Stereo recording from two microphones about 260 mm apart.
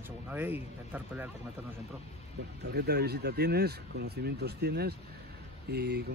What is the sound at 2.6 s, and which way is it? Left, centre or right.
Speech, right.